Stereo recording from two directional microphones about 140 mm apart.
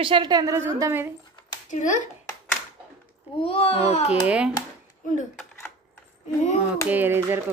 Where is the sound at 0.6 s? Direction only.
15° right (ahead or behind).